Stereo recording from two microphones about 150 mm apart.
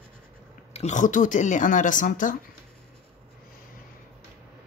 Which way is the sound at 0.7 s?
50° left (ahead or behind).